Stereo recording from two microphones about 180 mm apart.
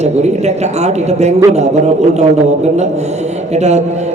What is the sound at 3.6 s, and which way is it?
Speech, 40° right (ahead or behind).